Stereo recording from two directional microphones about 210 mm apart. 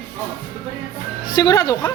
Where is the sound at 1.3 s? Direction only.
20° left (ahead or behind).